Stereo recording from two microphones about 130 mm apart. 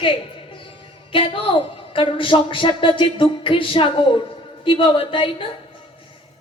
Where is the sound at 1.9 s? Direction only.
40° left (ahead or behind).